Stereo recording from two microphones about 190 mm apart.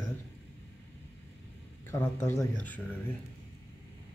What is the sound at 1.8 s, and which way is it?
A man's voice, 10° left (ahead or behind).